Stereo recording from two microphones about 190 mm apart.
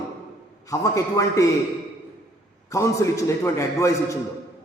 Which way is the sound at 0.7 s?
15° left (ahead or behind).